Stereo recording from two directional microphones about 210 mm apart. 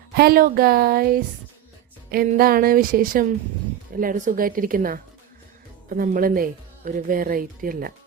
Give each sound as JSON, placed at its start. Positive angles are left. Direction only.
{"t": 0.1, "sound": "a woman's voice", "side_deg": -45}